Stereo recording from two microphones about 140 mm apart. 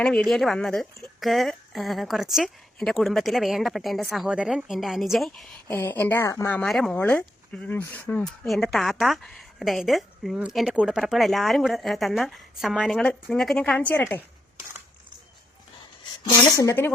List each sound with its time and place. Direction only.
0.0 s speech: 5° left (ahead or behind)
5.6 s speech: 15° left (ahead or behind)
6.7 s speech: centre (ahead or behind)
16.5 s speech: 20° left (ahead or behind)